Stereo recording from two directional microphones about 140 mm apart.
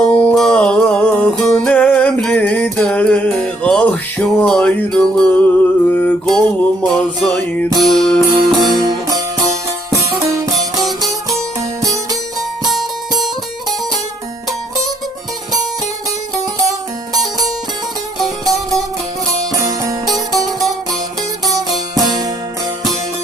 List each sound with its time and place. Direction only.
0.1 s music: 10° left (ahead or behind)
8.6 s music: 25° right (ahead or behind)
18.4 s music: 25° right (ahead or behind)
21.5 s music: 25° right (ahead or behind)